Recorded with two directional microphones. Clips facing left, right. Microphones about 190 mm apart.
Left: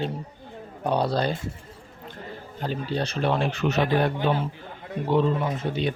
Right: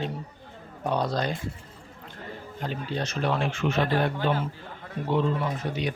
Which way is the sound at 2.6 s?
35° left (ahead or behind).